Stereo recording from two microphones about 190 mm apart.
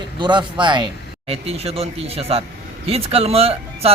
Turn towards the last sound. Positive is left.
turn(degrees=-30)  # may be behind; listen again after turning